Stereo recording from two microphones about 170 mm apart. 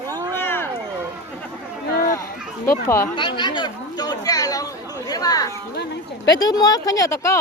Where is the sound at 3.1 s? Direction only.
30° left (ahead or behind).